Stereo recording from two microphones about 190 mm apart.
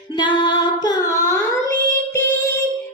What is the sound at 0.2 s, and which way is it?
Singing, 25° left (ahead or behind).